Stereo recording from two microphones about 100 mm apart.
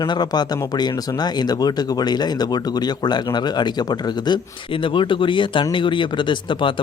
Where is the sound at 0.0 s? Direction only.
45° left (ahead or behind).